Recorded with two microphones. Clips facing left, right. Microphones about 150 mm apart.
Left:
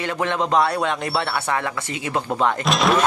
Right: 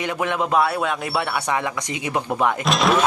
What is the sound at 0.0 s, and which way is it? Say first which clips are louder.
A man's voice: even; 10° right (ahead or behind).